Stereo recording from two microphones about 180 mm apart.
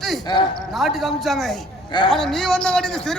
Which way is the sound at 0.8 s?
Centre (ahead or behind).